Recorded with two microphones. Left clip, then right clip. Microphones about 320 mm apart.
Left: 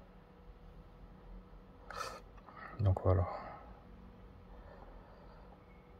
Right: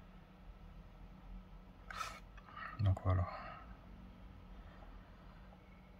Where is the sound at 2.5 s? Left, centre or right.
Centre.